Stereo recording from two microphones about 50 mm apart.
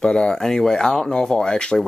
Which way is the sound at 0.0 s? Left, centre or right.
Centre.